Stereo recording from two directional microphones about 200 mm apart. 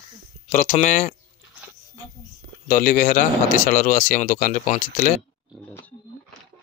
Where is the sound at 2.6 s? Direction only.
40° left (ahead or behind).